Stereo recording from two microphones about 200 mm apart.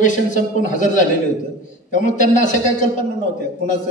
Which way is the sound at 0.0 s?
40° left (ahead or behind).